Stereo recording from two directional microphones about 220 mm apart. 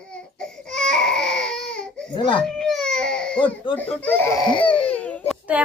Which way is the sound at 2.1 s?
20° left (ahead or behind).